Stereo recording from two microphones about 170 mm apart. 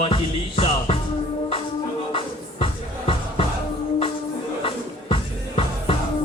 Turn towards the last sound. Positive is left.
turn(degrees=30)  # may be behind; listen again after turning